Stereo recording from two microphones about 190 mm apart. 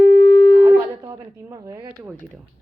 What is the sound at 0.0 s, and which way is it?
Shofar, 55° right (ahead or behind).